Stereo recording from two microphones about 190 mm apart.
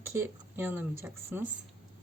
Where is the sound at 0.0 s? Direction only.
10° right (ahead or behind).